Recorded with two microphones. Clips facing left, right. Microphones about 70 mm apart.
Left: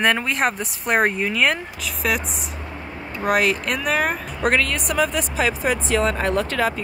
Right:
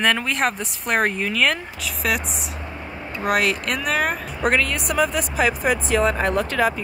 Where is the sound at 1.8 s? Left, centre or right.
Centre.